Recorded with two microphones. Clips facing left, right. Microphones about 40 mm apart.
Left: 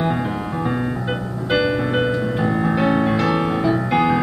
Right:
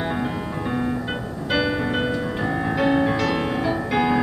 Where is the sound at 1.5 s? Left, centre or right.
Centre.